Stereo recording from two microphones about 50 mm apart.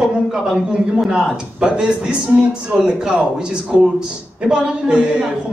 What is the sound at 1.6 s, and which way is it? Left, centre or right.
A man's voice, centre.